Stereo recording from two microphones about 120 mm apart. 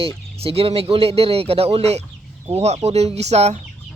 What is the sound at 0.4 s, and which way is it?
Speech, 55° right (ahead or behind).